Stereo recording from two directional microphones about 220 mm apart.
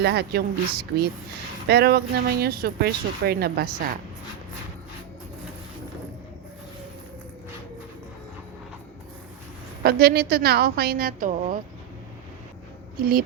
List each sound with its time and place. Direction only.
0.0 s a woman's voice: 45° right (ahead or behind)
9.8 s a woman's voice: 45° right (ahead or behind)
13.0 s a woman's voice: 40° right (ahead or behind)